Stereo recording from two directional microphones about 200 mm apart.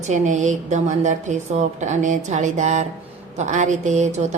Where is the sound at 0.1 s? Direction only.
35° right (ahead or behind).